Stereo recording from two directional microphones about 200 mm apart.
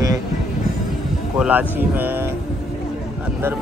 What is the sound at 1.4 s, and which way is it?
Speech, 10° right (ahead or behind).